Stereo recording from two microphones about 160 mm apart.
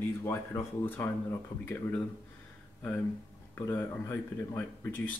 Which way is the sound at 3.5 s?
15° left (ahead or behind).